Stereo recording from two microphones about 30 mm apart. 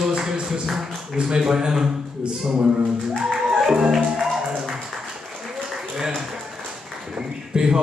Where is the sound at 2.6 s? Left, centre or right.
Right.